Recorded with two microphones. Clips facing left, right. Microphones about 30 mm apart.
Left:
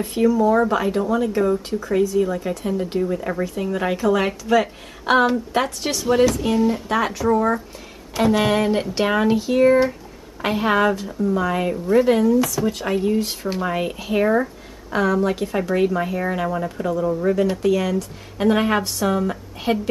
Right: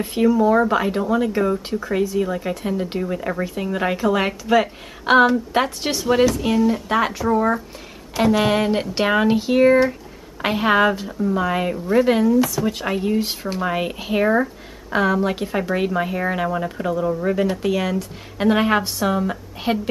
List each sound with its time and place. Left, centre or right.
0.0 s speech: centre